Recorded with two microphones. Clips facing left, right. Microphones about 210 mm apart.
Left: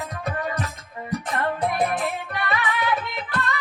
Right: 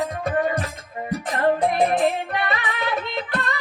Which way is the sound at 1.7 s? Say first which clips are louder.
Right 5 dB; 25° right (ahead or behind).